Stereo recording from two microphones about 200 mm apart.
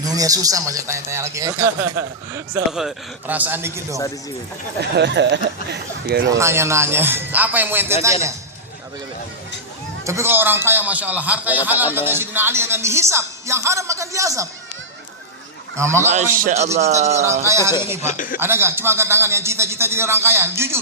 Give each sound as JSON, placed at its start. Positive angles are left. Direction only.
{"t": 0.0, "sound": "speech", "side_deg": -20}
{"t": 4.8, "sound": "speech", "side_deg": -60}
{"t": 6.3, "sound": "speech", "side_deg": -15}
{"t": 10.0, "sound": "speech", "side_deg": -15}
{"t": 15.7, "sound": "speech", "side_deg": -15}
{"t": 16.0, "sound": "speech", "side_deg": -40}
{"t": 17.4, "sound": "speech", "side_deg": -15}
{"t": 18.0, "sound": "speech", "side_deg": 40}
{"t": 18.3, "sound": "speech", "side_deg": -10}